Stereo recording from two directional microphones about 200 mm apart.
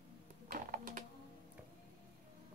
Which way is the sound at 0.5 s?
40° right (ahead or behind).